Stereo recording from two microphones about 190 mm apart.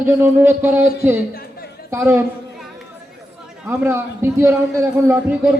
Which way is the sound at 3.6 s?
10° right (ahead or behind).